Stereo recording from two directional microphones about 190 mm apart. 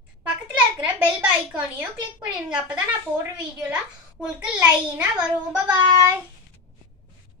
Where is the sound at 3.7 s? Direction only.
5° right (ahead or behind).